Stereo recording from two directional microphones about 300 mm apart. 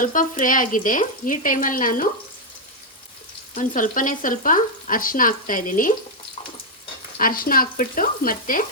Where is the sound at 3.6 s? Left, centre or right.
Left.